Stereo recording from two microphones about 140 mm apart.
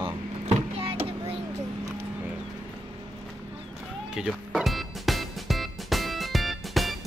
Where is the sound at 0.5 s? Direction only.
45° right (ahead or behind).